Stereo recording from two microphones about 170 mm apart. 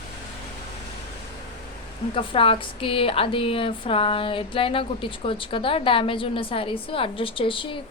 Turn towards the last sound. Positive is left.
turn(degrees=30)  # may be behind; listen again after turning